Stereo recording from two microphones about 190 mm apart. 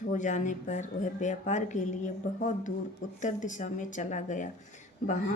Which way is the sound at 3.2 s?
40° left (ahead or behind).